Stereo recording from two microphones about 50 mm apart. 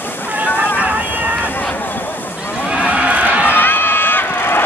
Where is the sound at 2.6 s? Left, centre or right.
Right.